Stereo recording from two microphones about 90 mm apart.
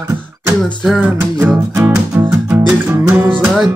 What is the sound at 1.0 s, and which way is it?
Music, 15° right (ahead or behind).